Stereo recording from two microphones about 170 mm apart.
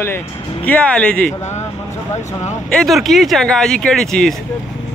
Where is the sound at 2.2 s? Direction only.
45° left (ahead or behind).